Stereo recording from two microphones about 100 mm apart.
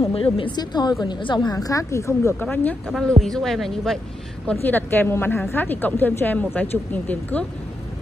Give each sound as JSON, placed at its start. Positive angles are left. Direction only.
{"t": 0.1, "sound": "speech", "side_deg": 70}
{"t": 0.5, "sound": "a woman's voice", "side_deg": 45}
{"t": 2.4, "sound": "speech", "side_deg": 15}
{"t": 2.9, "sound": "speech", "side_deg": 5}
{"t": 4.6, "sound": "a woman's voice", "side_deg": 20}